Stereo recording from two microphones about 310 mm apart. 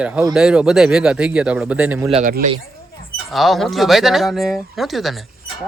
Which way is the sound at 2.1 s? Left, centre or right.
Right.